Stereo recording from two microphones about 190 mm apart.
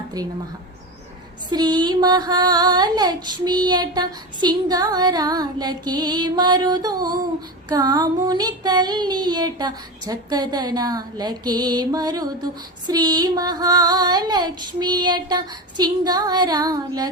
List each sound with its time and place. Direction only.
1.5 s female singing: 20° right (ahead or behind)